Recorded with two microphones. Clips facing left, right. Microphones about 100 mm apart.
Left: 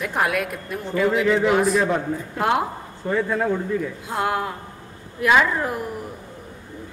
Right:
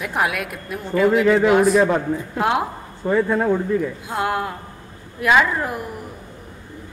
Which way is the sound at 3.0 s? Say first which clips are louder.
Right 4 dB; 35° right (ahead or behind).